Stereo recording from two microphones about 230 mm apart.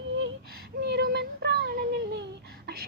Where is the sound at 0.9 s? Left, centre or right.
Right.